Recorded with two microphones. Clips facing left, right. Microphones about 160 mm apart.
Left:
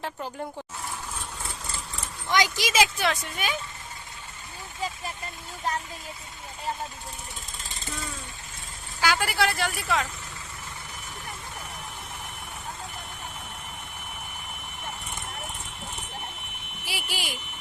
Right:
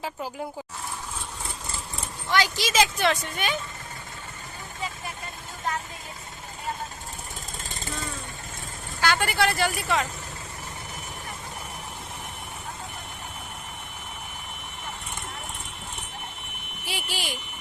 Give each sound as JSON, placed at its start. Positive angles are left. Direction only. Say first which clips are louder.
{"t": 2.3, "sound": "speech", "louder": "even", "side_deg": 15}
{"t": 9.0, "sound": "speech", "louder": "right 1 dB", "side_deg": 5}
{"t": 16.8, "sound": "a sound", "louder": "right 1 dB", "side_deg": 10}